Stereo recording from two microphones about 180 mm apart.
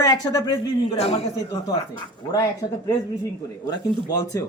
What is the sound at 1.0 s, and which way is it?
Speech, 35° left (ahead or behind).